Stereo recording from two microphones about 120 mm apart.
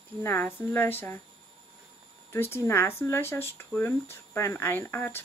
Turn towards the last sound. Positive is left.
turn(degrees=20)  # may be behind; listen again after turning